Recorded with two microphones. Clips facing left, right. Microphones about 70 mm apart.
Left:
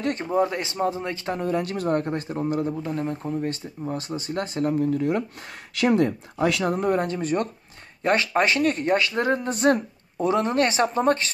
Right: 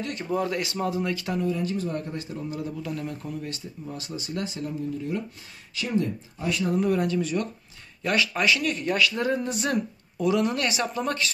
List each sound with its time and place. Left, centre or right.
0.0 s speech: left
0.4 s a man's voice: left
1.4 s speech: left
5.8 s speech: left
6.6 s speech: left